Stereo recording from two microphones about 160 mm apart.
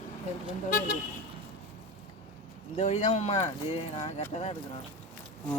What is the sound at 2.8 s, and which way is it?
Speech, 45° left (ahead or behind).